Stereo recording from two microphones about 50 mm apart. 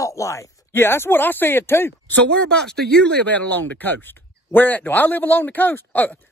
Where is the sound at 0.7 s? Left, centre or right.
Left.